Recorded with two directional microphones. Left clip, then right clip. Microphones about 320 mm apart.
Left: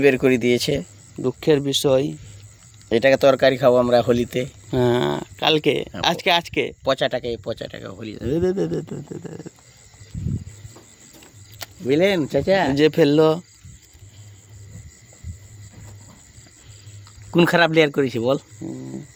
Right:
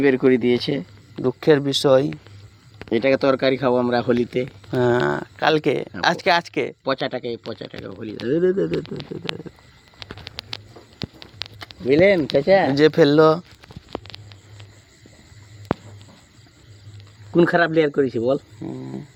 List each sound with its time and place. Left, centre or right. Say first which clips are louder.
0.0 s speech: even; left
1.2 s speech: right 2 dB; centre
2.9 s speech: left 3 dB; left
4.7 s speech: right 1 dB; centre
6.8 s speech: left 3 dB; left
11.6 s speech: right 3 dB; centre
12.7 s speech: right 2 dB; centre
17.3 s speech: left 1 dB; left
18.6 s speech: right 1 dB; centre